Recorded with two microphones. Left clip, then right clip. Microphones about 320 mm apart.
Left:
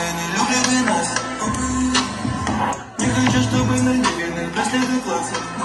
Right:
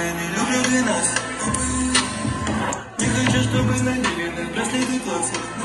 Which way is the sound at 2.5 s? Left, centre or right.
Left.